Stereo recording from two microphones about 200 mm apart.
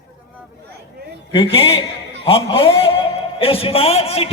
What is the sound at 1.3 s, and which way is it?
A man's voice, 25° left (ahead or behind).